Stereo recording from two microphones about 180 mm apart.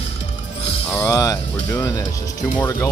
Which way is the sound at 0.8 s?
10° left (ahead or behind).